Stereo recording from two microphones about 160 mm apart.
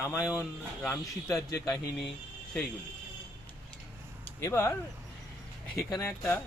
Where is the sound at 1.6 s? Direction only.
25° left (ahead or behind).